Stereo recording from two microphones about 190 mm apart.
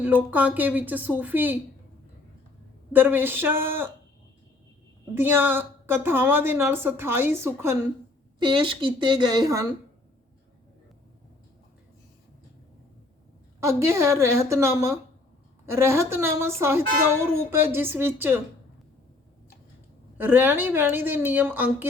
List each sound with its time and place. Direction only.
0.0 s a woman's voice: 10° right (ahead or behind)
2.9 s a woman's voice: 10° right (ahead or behind)
5.1 s a woman's voice: 10° right (ahead or behind)
8.4 s a woman's voice: 25° right (ahead or behind)
13.6 s a woman's voice: 15° right (ahead or behind)
20.1 s a woman's voice: 10° right (ahead or behind)